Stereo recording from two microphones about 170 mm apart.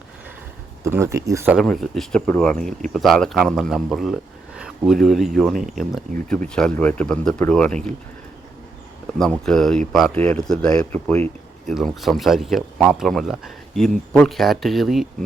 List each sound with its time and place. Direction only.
0.9 s speech: 15° right (ahead or behind)
1.5 s speech: centre (ahead or behind)
9.5 s speech: centre (ahead or behind)
11.7 s speech: centre (ahead or behind)